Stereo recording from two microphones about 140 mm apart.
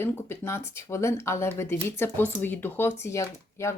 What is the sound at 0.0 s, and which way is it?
Speech, 20° left (ahead or behind).